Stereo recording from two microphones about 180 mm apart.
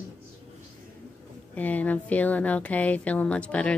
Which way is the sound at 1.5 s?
10° left (ahead or behind).